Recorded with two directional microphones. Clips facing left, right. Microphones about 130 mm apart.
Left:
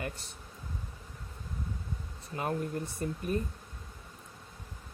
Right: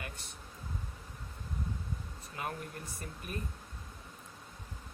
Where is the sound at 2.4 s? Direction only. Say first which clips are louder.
Left 7 dB; 30° left (ahead or behind).